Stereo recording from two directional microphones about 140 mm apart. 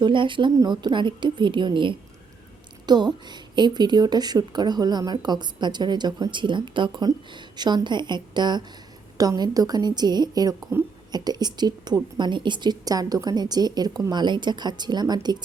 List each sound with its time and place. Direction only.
0.0 s a woman's voice: 35° right (ahead or behind)
10.7 s a woman's voice: 20° right (ahead or behind)
11.1 s a woman's voice: 30° right (ahead or behind)